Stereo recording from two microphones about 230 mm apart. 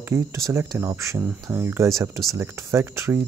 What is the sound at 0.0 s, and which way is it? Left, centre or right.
Speech, centre.